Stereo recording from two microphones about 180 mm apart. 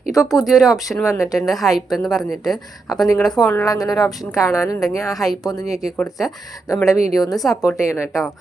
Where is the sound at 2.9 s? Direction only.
20° left (ahead or behind).